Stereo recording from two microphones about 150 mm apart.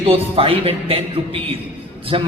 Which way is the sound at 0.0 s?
40° right (ahead or behind).